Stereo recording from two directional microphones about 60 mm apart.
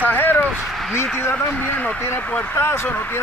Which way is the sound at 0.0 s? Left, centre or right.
Left.